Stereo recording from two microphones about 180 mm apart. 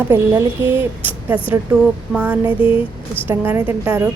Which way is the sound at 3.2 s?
10° right (ahead or behind).